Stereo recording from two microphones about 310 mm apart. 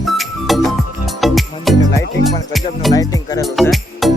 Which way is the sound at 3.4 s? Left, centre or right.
Centre.